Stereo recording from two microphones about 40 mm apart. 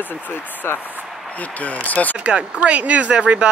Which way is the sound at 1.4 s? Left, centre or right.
Left.